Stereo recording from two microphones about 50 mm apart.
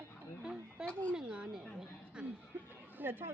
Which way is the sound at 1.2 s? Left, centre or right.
Centre.